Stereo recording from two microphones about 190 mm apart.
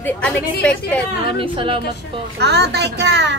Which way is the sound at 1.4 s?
25° right (ahead or behind).